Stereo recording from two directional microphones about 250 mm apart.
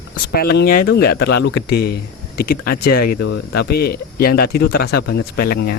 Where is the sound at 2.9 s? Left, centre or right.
Left.